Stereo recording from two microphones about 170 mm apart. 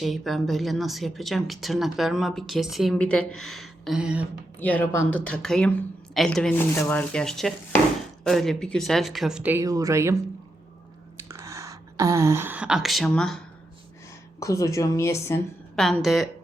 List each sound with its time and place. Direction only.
0.0 s speech: centre (ahead or behind)
4.6 s speech: 10° left (ahead or behind); by 10.2 s 15° right (ahead or behind)
11.3 s speech: 15° right (ahead or behind); by 13.4 s 5° left (ahead or behind)
14.3 s speech: 20° left (ahead or behind)
15.7 s speech: centre (ahead or behind)